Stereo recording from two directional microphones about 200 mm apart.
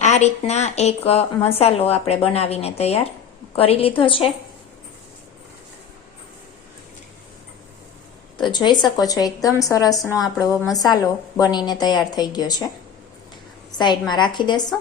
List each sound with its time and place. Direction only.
0.0 s a woman's voice: 35° left (ahead or behind)
8.4 s a woman's voice: 20° left (ahead or behind)
13.7 s a woman's voice: 20° left (ahead or behind)